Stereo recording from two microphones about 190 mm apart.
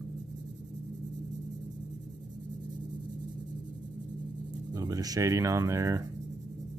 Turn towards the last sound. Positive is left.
turn(degrees=-15)  # may be behind; listen again after turning